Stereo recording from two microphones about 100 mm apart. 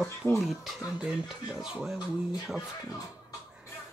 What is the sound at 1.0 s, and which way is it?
Speech, 5° right (ahead or behind).